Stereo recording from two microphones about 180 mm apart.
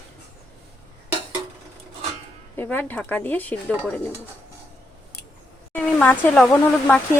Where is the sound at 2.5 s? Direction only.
10° left (ahead or behind).